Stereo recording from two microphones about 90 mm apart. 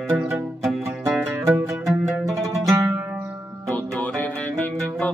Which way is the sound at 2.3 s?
35° right (ahead or behind).